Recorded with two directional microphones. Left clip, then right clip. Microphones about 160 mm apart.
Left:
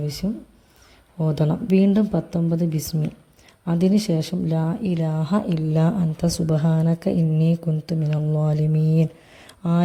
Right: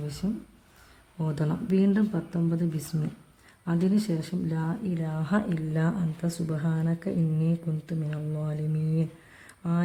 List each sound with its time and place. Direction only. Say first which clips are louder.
1.2 s speech: left 8 dB; 20° left (ahead or behind); by 9.0 s 40° left (ahead or behind)